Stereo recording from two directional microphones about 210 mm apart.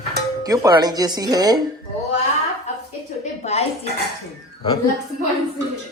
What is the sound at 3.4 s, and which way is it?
Speech, 30° left (ahead or behind).